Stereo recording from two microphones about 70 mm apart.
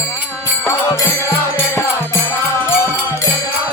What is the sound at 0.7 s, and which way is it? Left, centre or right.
Music, left.